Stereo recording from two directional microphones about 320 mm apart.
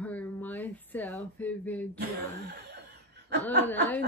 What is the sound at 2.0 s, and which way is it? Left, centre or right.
Chuckle, right.